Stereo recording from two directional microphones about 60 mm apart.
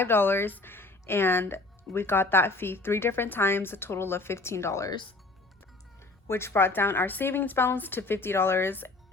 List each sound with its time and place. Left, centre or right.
0.0 s speech: left
6.2 s speech: left